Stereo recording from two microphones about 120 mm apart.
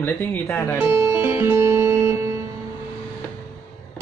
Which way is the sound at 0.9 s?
25° right (ahead or behind).